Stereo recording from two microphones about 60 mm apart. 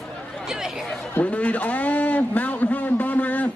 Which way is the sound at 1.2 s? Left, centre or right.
Left.